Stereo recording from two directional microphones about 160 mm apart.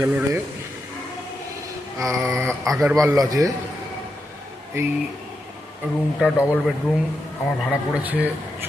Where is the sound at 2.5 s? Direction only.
Centre (ahead or behind).